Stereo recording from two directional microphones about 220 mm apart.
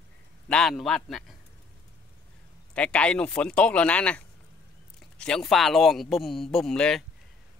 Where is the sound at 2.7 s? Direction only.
5° left (ahead or behind).